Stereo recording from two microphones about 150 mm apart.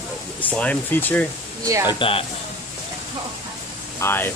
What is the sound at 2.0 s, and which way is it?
Speech, 40° left (ahead or behind).